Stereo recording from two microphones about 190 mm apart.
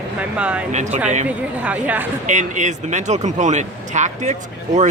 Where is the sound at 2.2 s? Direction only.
40° right (ahead or behind).